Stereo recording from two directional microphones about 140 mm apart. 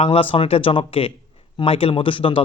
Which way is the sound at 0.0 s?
40° left (ahead or behind).